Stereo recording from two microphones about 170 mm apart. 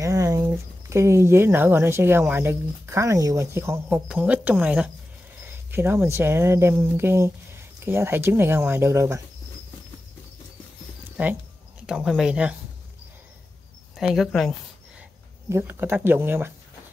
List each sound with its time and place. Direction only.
0.0 s speech: 20° right (ahead or behind)
11.8 s speech: 5° right (ahead or behind)
13.9 s speech: centre (ahead or behind)
15.5 s speech: 15° right (ahead or behind)